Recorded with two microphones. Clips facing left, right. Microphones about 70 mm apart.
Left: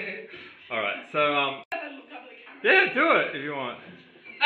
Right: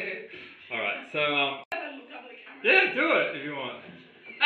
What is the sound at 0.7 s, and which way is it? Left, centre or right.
Speech, left.